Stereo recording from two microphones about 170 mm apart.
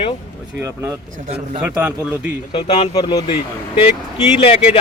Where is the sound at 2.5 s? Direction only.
35° left (ahead or behind).